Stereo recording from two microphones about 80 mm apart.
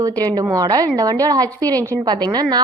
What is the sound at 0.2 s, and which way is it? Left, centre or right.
Speech, right.